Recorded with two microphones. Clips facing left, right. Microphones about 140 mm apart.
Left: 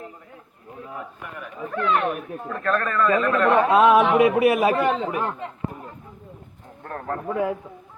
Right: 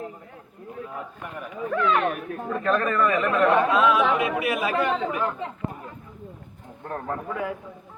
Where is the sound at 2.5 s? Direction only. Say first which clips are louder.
Right 1 dB; 15° right (ahead or behind).